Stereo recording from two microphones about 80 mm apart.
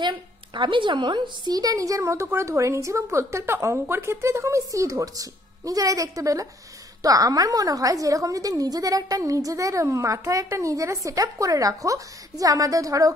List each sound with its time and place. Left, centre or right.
0.6 s a woman's voice: right
1.5 s a woman's voice: right